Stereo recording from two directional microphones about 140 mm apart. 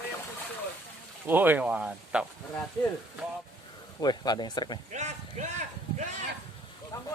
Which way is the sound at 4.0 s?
30° left (ahead or behind).